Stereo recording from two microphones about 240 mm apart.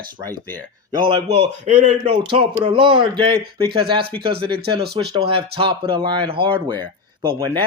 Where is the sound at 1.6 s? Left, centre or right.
Right.